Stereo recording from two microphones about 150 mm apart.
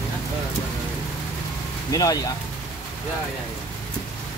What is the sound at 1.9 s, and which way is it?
Speech, 25° left (ahead or behind).